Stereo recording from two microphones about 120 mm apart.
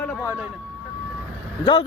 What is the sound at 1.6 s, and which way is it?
Speech, 50° left (ahead or behind).